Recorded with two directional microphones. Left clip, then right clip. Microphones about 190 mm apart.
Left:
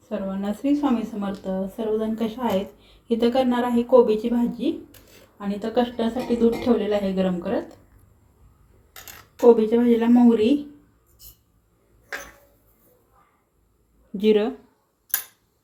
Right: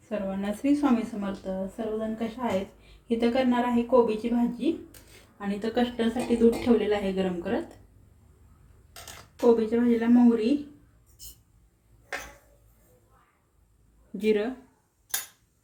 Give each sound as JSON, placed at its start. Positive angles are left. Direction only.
{"t": 0.1, "sound": "a woman's voice", "side_deg": 5}
{"t": 9.4, "sound": "speech", "side_deg": 20}
{"t": 14.2, "sound": "speech", "side_deg": 25}